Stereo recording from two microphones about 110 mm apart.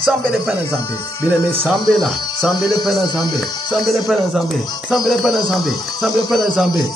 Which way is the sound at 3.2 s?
40° left (ahead or behind).